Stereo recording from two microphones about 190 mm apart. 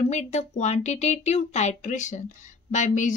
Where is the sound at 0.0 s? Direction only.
35° left (ahead or behind).